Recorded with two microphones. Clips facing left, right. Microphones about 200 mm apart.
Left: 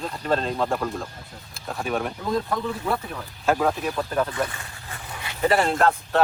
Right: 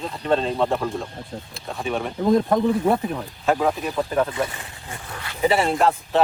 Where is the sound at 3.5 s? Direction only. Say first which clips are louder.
Right 1 dB; centre (ahead or behind).